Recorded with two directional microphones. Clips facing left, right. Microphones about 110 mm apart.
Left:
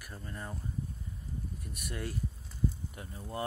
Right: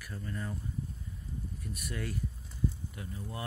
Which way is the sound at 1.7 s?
25° left (ahead or behind).